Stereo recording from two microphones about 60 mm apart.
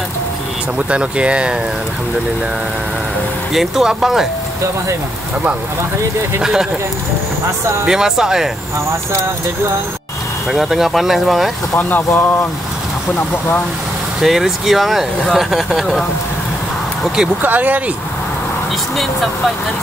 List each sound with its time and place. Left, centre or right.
0.7 s speech: centre
3.5 s speech: centre
6.4 s speech: centre
7.8 s speech: centre
10.5 s speech: centre
11.7 s speech: left
14.2 s speech: centre
17.4 s speech: right